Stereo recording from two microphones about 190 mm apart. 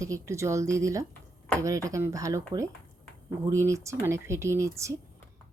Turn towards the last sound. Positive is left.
turn(degrees=-15)  # may be behind; listen again after turning